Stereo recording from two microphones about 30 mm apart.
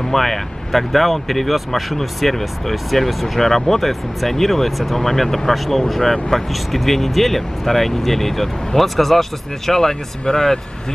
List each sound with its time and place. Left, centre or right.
0.1 s speech: centre